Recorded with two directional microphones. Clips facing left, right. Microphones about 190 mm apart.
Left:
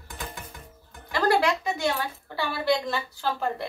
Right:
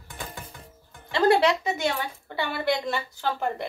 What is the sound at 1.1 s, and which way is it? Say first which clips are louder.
A woman's voice: right 3 dB; 25° right (ahead or behind).